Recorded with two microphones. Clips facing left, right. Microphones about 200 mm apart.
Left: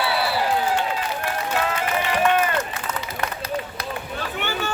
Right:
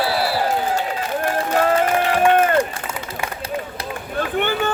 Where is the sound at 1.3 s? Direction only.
50° right (ahead or behind).